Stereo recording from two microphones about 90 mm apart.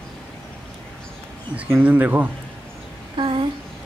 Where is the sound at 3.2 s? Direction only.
65° right (ahead or behind).